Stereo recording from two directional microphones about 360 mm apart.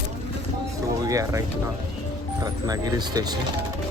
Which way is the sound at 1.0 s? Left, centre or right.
Centre.